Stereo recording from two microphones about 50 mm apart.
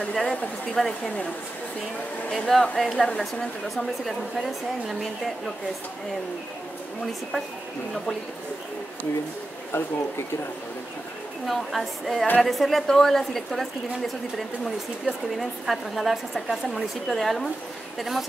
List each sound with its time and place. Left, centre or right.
0.0 s speech: centre
2.3 s speech: centre
3.7 s a woman's voice: centre
9.7 s speech: left
11.4 s a woman's voice: centre